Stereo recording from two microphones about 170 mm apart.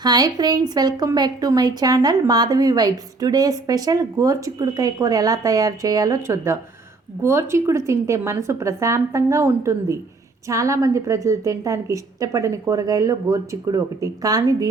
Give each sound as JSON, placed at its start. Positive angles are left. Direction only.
{"t": 0.0, "sound": "a woman's voice", "side_deg": -25}